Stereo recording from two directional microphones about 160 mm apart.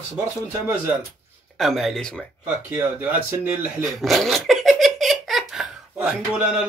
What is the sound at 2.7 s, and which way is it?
Speech, 10° right (ahead or behind).